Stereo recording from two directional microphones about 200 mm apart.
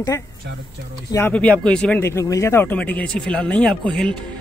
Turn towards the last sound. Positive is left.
turn(degrees=5)  # may be behind; listen again after turning